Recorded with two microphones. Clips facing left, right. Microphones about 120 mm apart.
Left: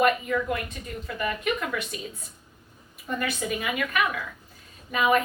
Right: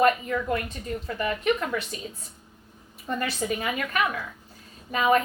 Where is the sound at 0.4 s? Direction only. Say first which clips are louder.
Right 2 dB; 35° right (ahead or behind).